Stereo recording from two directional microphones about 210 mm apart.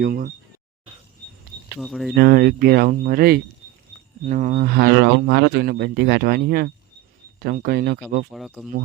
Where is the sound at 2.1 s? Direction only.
45° right (ahead or behind).